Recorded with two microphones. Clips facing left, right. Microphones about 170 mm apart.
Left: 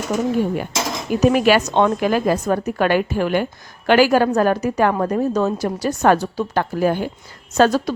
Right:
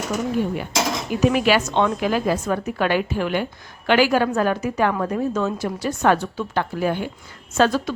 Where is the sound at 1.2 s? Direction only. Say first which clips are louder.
Left 3 dB; 45° left (ahead or behind).